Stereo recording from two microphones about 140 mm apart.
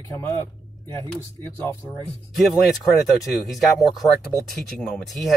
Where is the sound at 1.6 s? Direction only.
15° left (ahead or behind).